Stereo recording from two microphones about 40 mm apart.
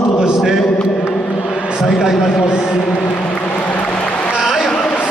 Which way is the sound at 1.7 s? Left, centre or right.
Centre.